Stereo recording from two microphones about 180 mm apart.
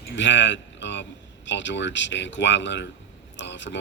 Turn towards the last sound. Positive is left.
turn(degrees=85)